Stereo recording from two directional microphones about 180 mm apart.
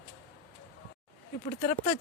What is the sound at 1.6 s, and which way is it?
Speech, 40° left (ahead or behind).